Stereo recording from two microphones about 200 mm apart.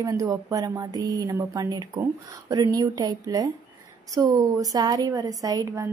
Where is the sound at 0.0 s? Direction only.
15° right (ahead or behind).